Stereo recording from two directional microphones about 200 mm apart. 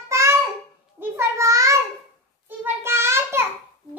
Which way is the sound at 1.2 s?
15° right (ahead or behind).